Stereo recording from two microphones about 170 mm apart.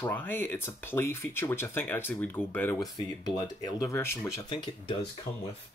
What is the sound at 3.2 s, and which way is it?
Speech, 25° left (ahead or behind).